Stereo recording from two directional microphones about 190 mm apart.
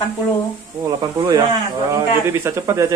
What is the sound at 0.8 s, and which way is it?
Speech, 20° right (ahead or behind).